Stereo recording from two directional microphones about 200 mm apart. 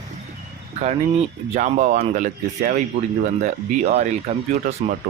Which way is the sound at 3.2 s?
35° right (ahead or behind).